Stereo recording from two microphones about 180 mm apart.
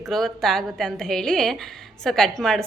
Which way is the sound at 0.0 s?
Centre (ahead or behind).